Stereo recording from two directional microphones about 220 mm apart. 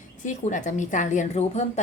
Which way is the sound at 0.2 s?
35° left (ahead or behind).